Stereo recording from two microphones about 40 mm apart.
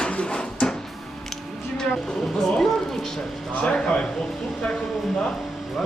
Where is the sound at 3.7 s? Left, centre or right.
Centre.